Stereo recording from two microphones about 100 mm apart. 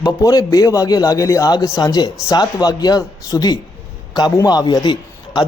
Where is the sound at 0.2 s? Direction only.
35° left (ahead or behind).